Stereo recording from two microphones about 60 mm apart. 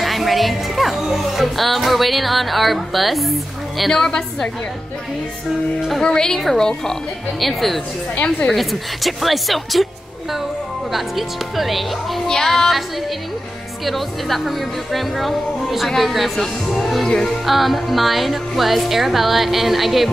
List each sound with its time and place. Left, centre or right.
0.0 s speech: centre
6.0 s a woman's voice: centre
8.2 s a woman's voice: left
8.5 s speech: centre
10.9 s speech: centre
13.8 s speech: centre